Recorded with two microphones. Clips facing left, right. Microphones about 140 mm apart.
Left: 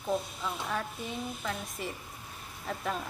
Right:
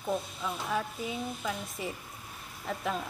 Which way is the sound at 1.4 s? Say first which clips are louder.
Right 1 dB; 5° right (ahead or behind).